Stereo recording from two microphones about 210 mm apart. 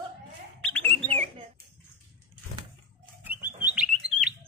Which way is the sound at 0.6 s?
5° left (ahead or behind).